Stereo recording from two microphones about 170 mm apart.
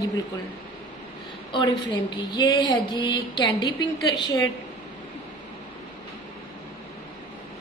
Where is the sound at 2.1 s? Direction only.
25° left (ahead or behind).